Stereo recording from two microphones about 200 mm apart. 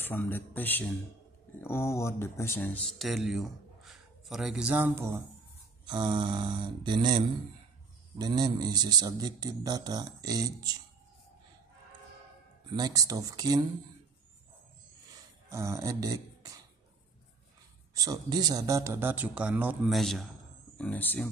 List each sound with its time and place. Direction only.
0.0 s a man's voice: 10° left (ahead or behind); by 5.2 s 10° right (ahead or behind)
5.9 s a man's voice: 25° right (ahead or behind)
12.7 s a man's voice: 20° right (ahead or behind)
15.5 s a sound: 15° right (ahead or behind)
17.9 s a man's voice: 20° right (ahead or behind); by 21.3 s 10° left (ahead or behind)